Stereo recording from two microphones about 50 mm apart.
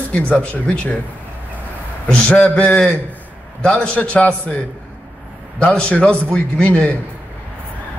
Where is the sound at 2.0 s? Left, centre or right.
Centre.